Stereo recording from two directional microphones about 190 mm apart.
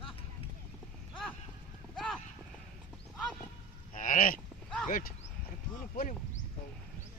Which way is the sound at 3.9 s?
45° left (ahead or behind).